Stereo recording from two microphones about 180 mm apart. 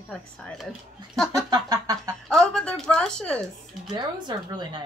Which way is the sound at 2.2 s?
5° left (ahead or behind).